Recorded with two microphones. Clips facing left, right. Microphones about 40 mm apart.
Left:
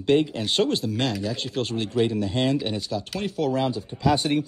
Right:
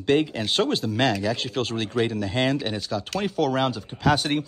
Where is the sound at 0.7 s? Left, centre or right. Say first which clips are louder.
Right 2 dB; right.